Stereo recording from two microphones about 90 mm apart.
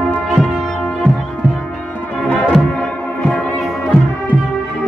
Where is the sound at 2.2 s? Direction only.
10° left (ahead or behind).